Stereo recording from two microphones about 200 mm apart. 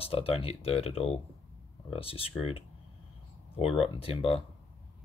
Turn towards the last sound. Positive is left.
turn(degrees=30)  # may be behind; listen again after turning